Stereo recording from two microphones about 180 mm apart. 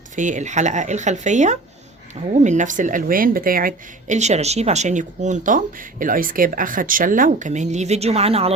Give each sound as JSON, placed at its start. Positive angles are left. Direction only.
{"t": 0.2, "sound": "speech", "side_deg": -45}